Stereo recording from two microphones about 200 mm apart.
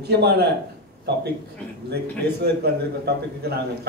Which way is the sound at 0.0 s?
55° right (ahead or behind).